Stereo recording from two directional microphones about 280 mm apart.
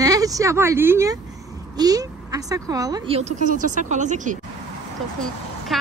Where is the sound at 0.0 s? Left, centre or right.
Centre.